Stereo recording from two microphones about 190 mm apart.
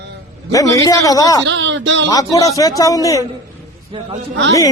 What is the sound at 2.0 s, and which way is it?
A man's voice, 20° left (ahead or behind).